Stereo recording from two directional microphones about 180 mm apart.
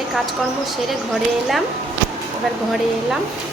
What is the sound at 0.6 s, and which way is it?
A woman's voice, centre (ahead or behind).